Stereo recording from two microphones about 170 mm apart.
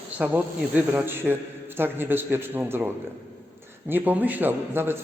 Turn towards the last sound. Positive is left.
turn(degrees=-15)  # may be behind; listen again after turning